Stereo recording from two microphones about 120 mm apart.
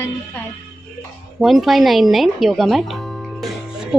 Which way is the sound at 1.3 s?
Centre (ahead or behind).